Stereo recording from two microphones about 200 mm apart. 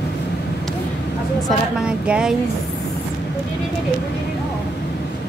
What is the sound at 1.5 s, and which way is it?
Speech, 5° right (ahead or behind).